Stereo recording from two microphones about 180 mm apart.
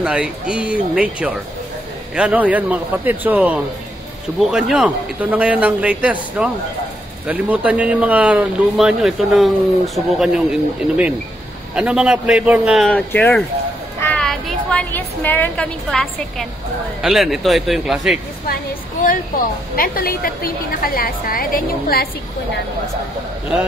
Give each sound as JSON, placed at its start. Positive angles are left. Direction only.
{"t": 0.0, "sound": "a man's voice", "side_deg": -5}
{"t": 13.9, "sound": "a sound", "side_deg": 10}
{"t": 17.0, "sound": "a man's voice", "side_deg": 0}
{"t": 19.7, "sound": "a woman's voice", "side_deg": 55}